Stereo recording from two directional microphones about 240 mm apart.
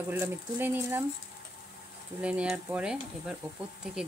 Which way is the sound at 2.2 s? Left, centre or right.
Centre.